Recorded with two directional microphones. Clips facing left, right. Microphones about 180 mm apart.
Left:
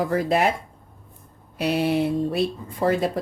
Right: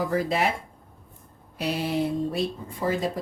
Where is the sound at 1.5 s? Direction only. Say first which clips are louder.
Left 5 dB; 65° left (ahead or behind).